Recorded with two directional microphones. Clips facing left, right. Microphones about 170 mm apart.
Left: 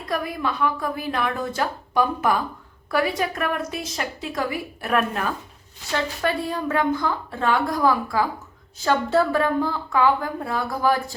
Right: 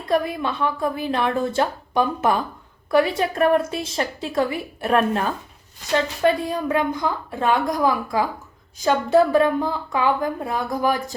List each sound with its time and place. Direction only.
0.1 s a woman's voice: 25° right (ahead or behind)
6.2 s a woman's voice: 15° right (ahead or behind)